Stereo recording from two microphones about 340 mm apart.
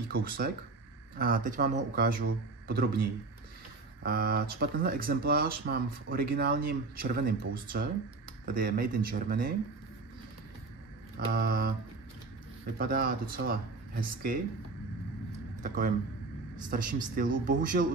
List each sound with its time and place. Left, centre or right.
0.1 s speech: right
11.1 s speech: right
12.7 s speech: right
15.6 s speech: right